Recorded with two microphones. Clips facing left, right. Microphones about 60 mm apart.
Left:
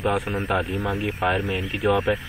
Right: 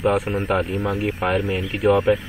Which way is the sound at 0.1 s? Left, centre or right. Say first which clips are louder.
Right 3 dB; centre.